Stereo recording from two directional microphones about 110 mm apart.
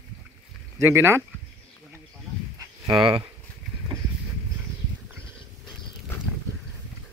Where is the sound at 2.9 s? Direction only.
55° right (ahead or behind).